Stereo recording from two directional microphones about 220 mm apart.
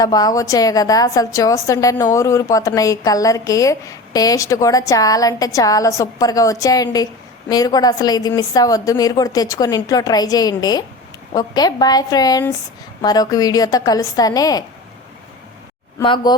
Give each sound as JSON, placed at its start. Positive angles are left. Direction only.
{"t": 0.0, "sound": "a woman's voice", "side_deg": 15}
{"t": 16.0, "sound": "speech", "side_deg": 20}